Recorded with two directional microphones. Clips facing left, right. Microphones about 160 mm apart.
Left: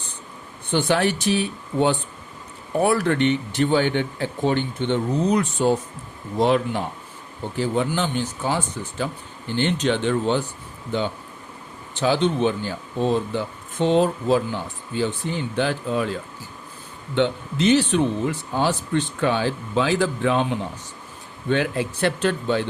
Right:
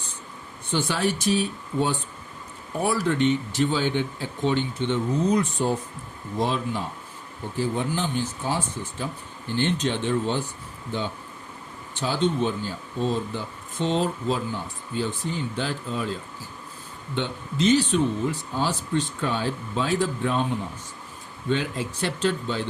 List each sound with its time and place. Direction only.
0.7 s speech: 60° left (ahead or behind)
7.6 s speech: 90° left
9.6 s speech: 80° left
11.9 s speech: 70° left (ahead or behind)
17.2 s speech: 65° left (ahead or behind)
21.5 s speech: 65° left (ahead or behind)